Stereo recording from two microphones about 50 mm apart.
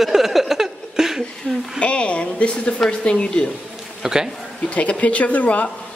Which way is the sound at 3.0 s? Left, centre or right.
Centre.